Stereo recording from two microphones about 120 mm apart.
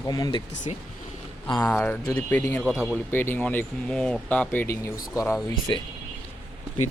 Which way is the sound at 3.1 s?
15° left (ahead or behind).